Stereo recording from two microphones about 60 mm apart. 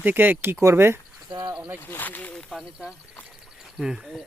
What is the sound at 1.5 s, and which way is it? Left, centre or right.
Snake, right.